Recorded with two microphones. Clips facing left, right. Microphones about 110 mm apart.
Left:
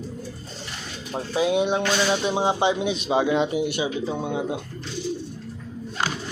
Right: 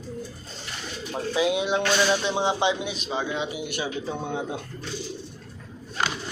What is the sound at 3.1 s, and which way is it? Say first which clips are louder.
Speech: left 8 dB; 90° left.